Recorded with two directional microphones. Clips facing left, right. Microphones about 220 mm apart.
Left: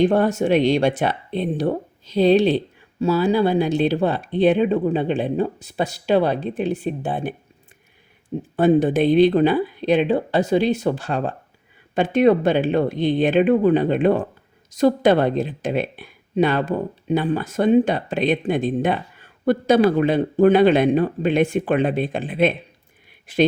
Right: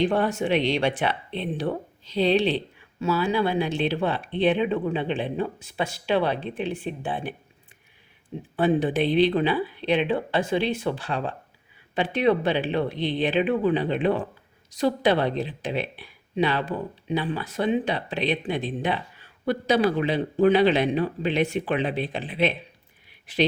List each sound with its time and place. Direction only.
0.0 s speech: 45° left (ahead or behind)
8.5 s speech: 45° left (ahead or behind)